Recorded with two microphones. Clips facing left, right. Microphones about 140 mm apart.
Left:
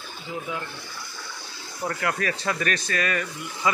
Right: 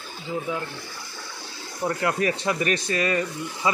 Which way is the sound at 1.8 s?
20° right (ahead or behind).